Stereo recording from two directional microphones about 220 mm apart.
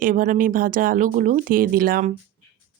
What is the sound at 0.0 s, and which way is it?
Speech, 40° right (ahead or behind).